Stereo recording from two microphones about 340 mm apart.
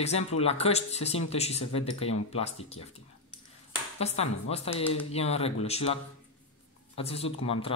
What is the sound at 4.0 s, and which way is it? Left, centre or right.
Speech, centre.